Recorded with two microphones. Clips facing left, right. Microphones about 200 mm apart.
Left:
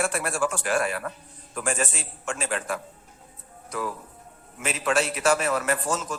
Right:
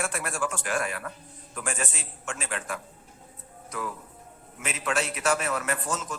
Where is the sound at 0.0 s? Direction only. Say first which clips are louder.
Left 5 dB; 35° left (ahead or behind).